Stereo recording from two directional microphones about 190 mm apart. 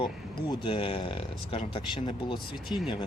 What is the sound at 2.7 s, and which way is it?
Speech, 10° right (ahead or behind).